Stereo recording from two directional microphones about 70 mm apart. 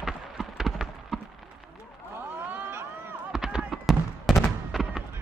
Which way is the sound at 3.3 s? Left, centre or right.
Centre.